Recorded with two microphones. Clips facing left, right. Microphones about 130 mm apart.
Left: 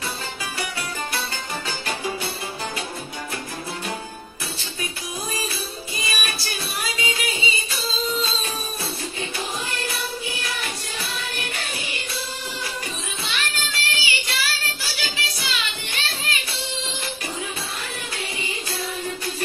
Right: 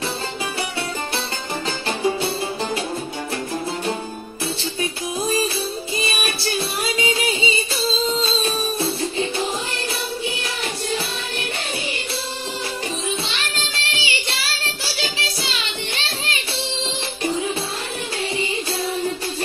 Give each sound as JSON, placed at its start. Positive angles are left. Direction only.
{"t": 1.9, "sound": "music", "side_deg": -30}
{"t": 5.9, "sound": "music", "side_deg": -25}
{"t": 13.2, "sound": "child singing", "side_deg": -30}
{"t": 18.4, "sound": "music", "side_deg": -25}